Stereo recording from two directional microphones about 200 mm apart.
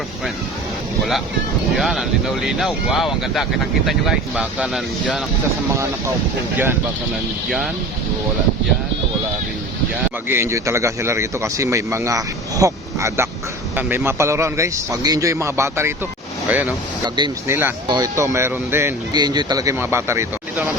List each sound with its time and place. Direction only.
1.7 s speech: centre (ahead or behind)
10.2 s speech: 15° right (ahead or behind)
17.2 s speech: 20° right (ahead or behind)